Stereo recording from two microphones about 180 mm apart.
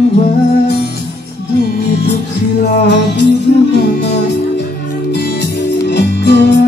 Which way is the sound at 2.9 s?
70° left (ahead or behind).